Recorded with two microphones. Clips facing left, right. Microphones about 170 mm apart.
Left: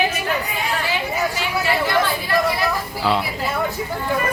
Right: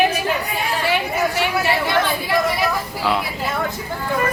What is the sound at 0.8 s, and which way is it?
Chatter, 60° right (ahead or behind).